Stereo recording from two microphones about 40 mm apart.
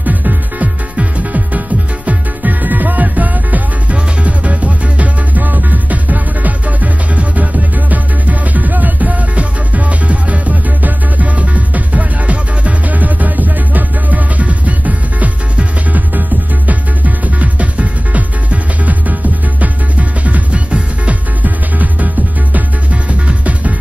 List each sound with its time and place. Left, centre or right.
0.0 s music: right
2.0 s music: right